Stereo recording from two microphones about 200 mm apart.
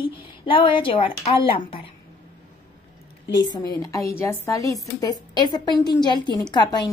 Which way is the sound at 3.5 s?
20° left (ahead or behind).